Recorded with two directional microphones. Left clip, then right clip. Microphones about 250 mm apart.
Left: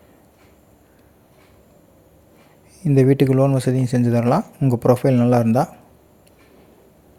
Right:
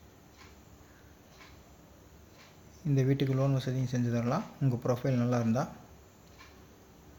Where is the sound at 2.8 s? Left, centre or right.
Left.